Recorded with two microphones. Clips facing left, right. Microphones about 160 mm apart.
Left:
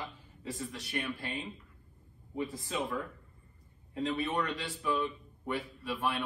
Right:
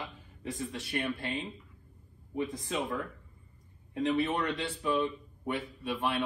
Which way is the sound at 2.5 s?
20° right (ahead or behind).